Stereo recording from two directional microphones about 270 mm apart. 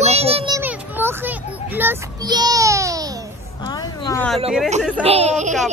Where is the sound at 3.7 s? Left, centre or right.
Centre.